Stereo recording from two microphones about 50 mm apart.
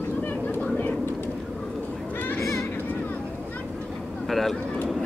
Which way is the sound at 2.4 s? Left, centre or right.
Left.